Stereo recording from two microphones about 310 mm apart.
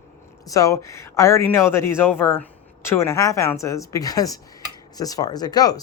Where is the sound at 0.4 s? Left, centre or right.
Centre.